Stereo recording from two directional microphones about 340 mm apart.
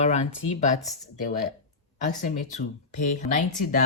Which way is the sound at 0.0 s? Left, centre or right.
Centre.